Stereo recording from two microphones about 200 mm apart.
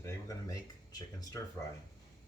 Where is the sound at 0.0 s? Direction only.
15° left (ahead or behind).